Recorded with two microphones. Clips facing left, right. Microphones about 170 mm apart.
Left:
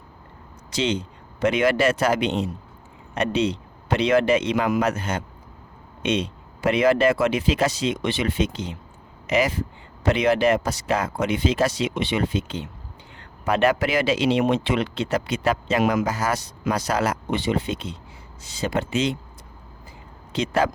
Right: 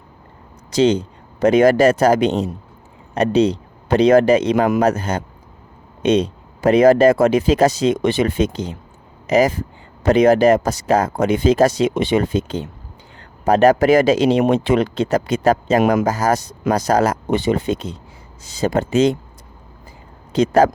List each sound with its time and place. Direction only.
0.7 s speech: 40° right (ahead or behind)
20.3 s speech: 40° right (ahead or behind)